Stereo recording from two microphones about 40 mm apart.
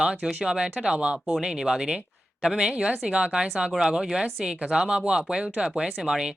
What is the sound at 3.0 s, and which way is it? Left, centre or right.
Speech, right.